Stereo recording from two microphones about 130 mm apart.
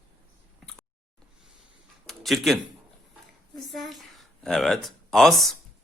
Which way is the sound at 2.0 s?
Centre (ahead or behind).